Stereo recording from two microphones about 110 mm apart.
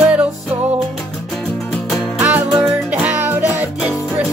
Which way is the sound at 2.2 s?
20° right (ahead or behind).